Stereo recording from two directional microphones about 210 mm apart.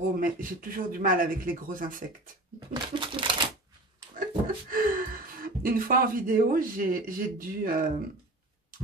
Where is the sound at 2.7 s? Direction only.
25° right (ahead or behind).